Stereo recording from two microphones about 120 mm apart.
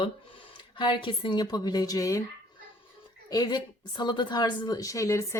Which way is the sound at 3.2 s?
35° left (ahead or behind).